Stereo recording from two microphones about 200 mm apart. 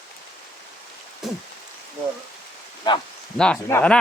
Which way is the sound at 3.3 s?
5° left (ahead or behind).